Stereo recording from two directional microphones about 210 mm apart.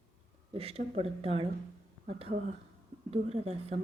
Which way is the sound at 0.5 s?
30° right (ahead or behind).